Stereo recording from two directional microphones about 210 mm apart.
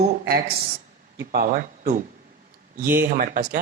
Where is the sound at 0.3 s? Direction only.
45° right (ahead or behind).